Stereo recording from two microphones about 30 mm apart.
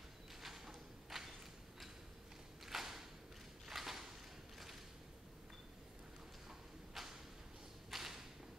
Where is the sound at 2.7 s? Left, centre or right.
Centre.